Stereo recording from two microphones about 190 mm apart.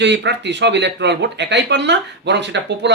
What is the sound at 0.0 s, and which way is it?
A man's voice, 65° right (ahead or behind).